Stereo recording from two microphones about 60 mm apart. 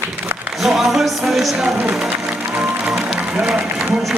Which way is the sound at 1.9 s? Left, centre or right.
Centre.